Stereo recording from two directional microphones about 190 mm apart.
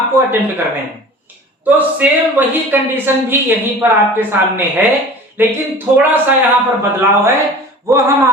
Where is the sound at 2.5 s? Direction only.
10° right (ahead or behind).